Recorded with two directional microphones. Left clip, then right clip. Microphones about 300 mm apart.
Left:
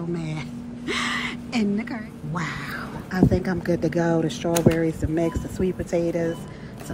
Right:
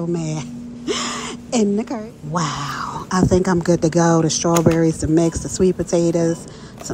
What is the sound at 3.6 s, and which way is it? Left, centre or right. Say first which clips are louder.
Speech: right 7 dB; centre.